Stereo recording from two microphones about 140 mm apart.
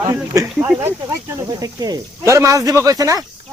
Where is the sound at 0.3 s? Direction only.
25° right (ahead or behind).